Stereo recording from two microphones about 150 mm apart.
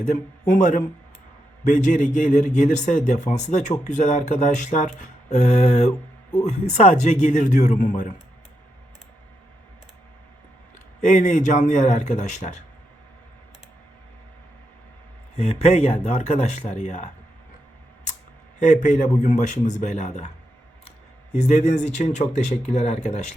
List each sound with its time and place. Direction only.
0.0 s a man's voice: 55° left (ahead or behind)
11.0 s speech: 55° left (ahead or behind)
15.4 s speech: 45° left (ahead or behind)
18.6 s speech: 55° left (ahead or behind)
21.3 s speech: 50° left (ahead or behind)